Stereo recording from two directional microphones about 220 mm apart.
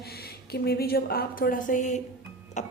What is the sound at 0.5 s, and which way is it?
A woman's voice, 45° left (ahead or behind).